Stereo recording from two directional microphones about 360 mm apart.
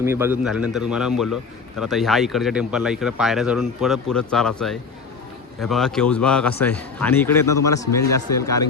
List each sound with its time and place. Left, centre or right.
0.0 s speech: centre